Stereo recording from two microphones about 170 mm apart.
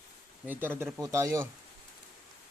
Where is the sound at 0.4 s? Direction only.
10° right (ahead or behind).